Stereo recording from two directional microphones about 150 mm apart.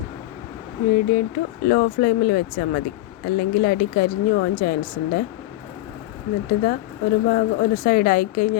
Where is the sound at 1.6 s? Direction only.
85° left.